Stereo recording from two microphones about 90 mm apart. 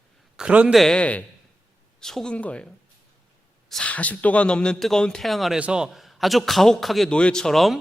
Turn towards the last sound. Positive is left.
turn(degrees=5)  # may be behind; listen again after turning